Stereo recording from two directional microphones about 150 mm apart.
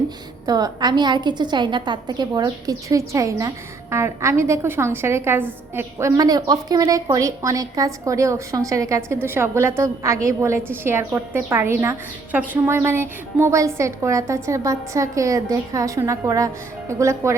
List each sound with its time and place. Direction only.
0.4 s a woman's voice: 25° right (ahead or behind)